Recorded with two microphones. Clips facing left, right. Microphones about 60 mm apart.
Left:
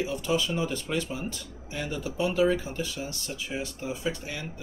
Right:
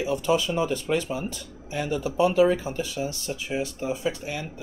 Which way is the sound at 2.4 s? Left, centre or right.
Right.